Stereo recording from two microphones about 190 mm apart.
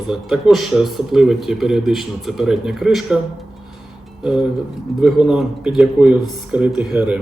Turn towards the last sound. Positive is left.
turn(degrees=-5)  # may be behind; listen again after turning